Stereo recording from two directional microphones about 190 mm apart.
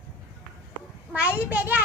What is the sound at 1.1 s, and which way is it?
Speech, 5° right (ahead or behind).